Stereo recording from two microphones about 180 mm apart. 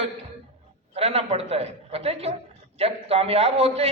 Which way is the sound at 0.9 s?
35° right (ahead or behind).